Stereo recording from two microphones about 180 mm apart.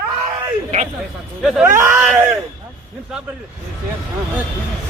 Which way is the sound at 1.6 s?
15° right (ahead or behind).